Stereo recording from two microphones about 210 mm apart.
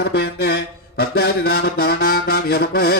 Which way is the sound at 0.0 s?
50° left (ahead or behind).